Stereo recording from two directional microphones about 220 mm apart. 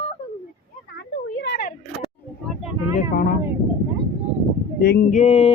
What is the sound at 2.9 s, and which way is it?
Speech, 35° left (ahead or behind).